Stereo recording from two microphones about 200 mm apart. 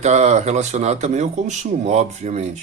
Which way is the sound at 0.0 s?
35° right (ahead or behind).